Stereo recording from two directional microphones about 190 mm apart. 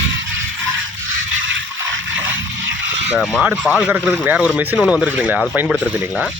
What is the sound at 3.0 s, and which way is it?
Speech, 5° right (ahead or behind).